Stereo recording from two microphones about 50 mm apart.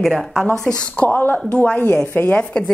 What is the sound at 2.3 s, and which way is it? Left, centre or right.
Speech, left.